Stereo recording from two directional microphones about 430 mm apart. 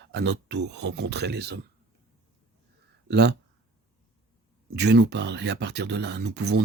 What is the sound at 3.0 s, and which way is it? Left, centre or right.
Speech, right.